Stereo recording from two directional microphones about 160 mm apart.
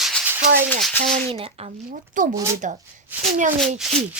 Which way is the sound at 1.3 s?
35° right (ahead or behind).